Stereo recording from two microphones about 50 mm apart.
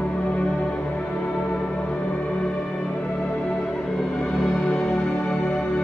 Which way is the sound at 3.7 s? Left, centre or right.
Centre.